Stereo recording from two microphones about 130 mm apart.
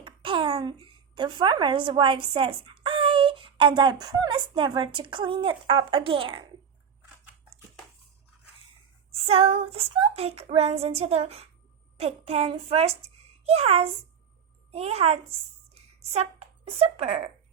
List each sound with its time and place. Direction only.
0.0 s a child's voice: 40° right (ahead or behind)
9.2 s child singing: 50° right (ahead or behind)
11.9 s a child's voice: 50° right (ahead or behind)
14.7 s child singing: 50° right (ahead or behind)
16.0 s a woman's voice: 55° right (ahead or behind)